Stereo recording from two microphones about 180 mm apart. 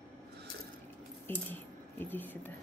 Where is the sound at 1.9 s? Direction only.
10° left (ahead or behind).